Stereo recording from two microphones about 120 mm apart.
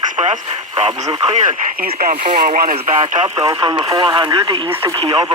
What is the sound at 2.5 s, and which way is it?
Speech, 90° right.